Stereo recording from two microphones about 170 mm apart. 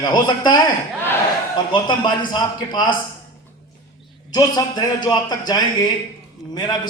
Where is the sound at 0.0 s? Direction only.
25° left (ahead or behind).